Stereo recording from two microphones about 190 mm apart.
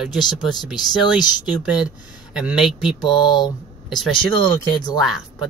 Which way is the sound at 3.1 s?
20° left (ahead or behind).